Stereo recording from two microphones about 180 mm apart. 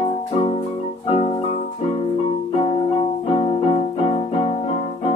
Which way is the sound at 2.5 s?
30° left (ahead or behind).